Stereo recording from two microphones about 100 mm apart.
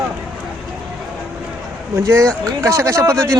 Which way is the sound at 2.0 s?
30° right (ahead or behind).